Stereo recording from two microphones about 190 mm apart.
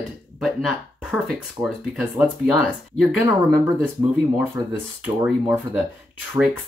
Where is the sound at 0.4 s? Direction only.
Centre (ahead or behind).